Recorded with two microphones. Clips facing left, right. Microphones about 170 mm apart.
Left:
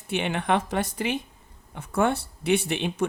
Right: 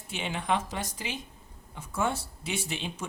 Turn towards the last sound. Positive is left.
turn(degrees=60)  # may be behind; listen again after turning